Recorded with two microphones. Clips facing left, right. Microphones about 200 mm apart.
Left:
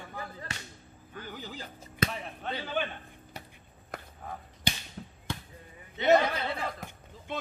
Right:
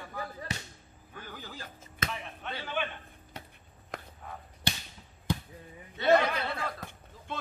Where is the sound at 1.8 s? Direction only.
35° left (ahead or behind).